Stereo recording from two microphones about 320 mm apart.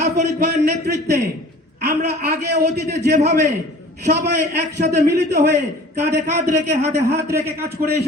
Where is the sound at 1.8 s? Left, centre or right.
Right.